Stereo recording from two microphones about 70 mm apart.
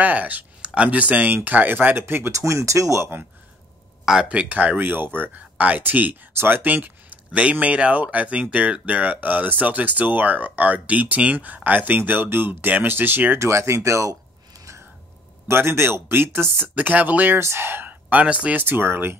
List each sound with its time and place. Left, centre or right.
0.0 s speech: right
2.3 s speech: right
4.0 s speech: centre; by 13.4 s right
13.4 s speech: right
15.4 s speech: right
17.4 s speech: right; by 18.6 s centre
18.6 s speech: right